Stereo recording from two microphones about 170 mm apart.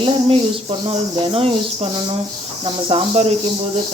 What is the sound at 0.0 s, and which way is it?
Speech, 30° right (ahead or behind).